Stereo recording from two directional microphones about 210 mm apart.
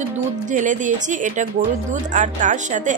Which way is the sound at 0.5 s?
35° right (ahead or behind).